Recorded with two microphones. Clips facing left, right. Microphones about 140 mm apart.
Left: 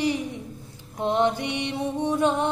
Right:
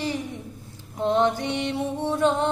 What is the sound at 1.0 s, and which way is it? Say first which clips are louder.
Mantra: right 1 dB; 15° left (ahead or behind).